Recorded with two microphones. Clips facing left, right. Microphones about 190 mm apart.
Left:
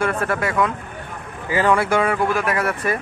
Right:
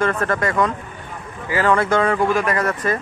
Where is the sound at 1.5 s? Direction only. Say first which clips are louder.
Even; 20° left (ahead or behind).